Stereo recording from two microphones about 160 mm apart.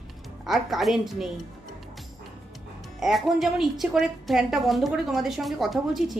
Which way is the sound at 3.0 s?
Centre (ahead or behind).